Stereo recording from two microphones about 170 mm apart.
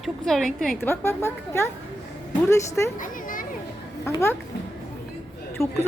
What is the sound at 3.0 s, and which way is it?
Children playing, 55° left (ahead or behind).